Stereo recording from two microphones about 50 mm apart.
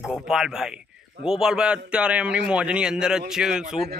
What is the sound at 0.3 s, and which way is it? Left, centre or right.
A man's voice, centre.